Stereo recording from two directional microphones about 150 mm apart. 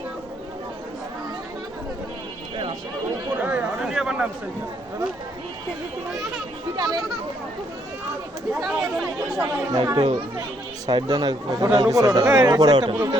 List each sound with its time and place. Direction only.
3.4 s a sound: 5° right (ahead or behind)
6.7 s speech: 25° right (ahead or behind)
9.4 s speech: 25° right (ahead or behind)